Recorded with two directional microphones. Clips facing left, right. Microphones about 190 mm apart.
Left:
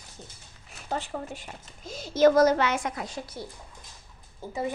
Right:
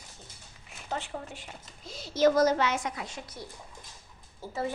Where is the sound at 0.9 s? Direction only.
40° left (ahead or behind).